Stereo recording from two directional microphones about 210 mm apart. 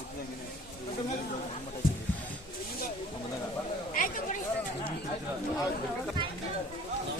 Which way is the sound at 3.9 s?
40° left (ahead or behind).